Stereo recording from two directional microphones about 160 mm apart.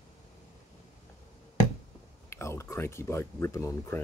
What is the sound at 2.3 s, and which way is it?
Speech, 15° left (ahead or behind).